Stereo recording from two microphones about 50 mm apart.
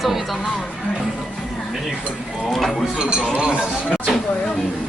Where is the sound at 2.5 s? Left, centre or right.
Centre.